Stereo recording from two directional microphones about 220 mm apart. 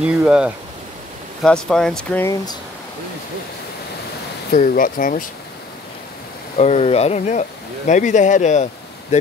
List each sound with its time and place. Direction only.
0.0 s speech: 5° right (ahead or behind)
4.5 s speech: 35° left (ahead or behind)
6.5 s speech: 30° left (ahead or behind)